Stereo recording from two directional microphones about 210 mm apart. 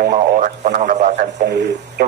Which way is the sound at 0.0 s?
40° right (ahead or behind).